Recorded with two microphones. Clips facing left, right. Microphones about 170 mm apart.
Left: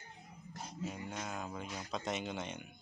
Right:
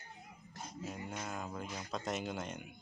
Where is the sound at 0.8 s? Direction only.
5° right (ahead or behind).